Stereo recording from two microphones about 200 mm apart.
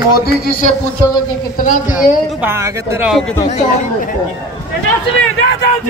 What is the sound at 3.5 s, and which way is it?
Speech, 40° left (ahead or behind).